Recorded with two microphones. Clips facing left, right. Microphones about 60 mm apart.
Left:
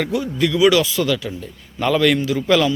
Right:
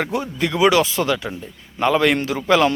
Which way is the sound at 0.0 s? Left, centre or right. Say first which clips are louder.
Left 2 dB; right.